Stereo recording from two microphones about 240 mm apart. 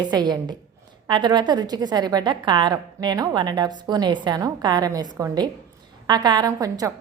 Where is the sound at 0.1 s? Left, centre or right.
Centre.